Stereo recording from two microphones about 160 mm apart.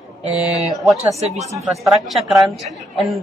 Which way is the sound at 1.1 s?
40° right (ahead or behind).